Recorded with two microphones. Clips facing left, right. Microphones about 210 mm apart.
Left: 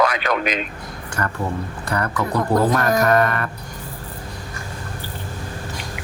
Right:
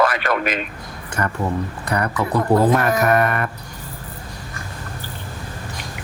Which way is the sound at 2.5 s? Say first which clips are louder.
Right 2 dB; 40° left (ahead or behind).